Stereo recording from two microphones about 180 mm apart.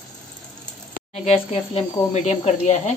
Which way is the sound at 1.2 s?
35° left (ahead or behind).